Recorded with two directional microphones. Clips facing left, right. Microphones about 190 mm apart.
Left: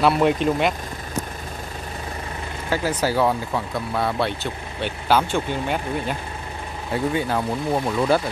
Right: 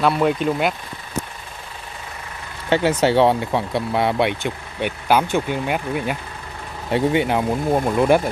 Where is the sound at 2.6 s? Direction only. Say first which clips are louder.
Right 6 dB; 25° right (ahead or behind); by 6.2 s 10° right (ahead or behind).